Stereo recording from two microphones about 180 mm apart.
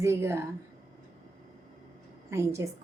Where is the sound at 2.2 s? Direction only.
15° right (ahead or behind).